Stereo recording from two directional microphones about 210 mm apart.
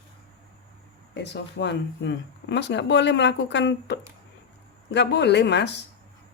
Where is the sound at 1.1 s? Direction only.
55° left (ahead or behind).